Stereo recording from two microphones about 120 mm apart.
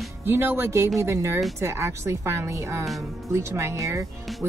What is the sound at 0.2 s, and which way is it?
Speech, 20° right (ahead or behind).